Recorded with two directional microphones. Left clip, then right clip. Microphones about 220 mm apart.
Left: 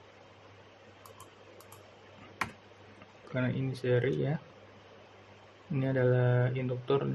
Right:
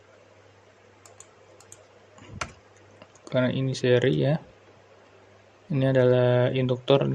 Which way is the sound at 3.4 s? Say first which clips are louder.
Right 10 dB; 25° right (ahead or behind).